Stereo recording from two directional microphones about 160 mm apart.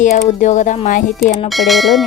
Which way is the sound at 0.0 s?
50° left (ahead or behind).